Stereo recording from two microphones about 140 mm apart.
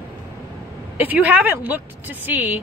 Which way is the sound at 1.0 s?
10° right (ahead or behind).